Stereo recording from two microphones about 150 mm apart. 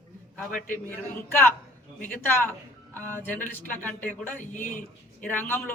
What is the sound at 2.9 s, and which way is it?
Speech, 15° left (ahead or behind).